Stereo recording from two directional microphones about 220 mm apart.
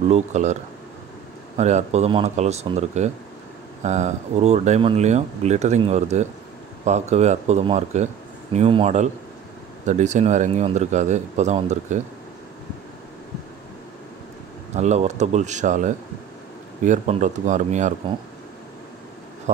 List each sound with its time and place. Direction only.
0.1 s speech: 30° right (ahead or behind)
1.6 s speech: 30° right (ahead or behind)
14.8 s speech: 30° right (ahead or behind)